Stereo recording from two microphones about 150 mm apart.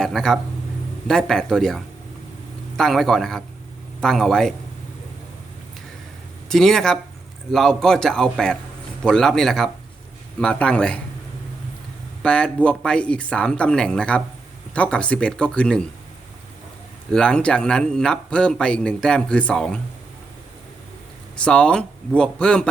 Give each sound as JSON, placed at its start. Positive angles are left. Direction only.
{"t": 0.0, "sound": "a sound", "side_deg": 5}
{"t": 1.0, "sound": "speech", "side_deg": 5}
{"t": 6.5, "sound": "speech", "side_deg": 5}
{"t": 12.2, "sound": "speech", "side_deg": 5}
{"t": 17.1, "sound": "speech", "side_deg": 5}
{"t": 21.4, "sound": "speech", "side_deg": 5}